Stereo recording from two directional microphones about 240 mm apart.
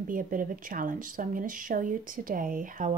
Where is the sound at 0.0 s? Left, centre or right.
Right.